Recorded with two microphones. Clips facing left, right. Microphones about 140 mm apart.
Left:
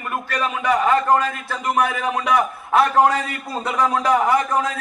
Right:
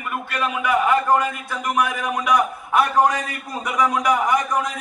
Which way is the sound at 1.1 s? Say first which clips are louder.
Left 1 dB; 10° right (ahead or behind).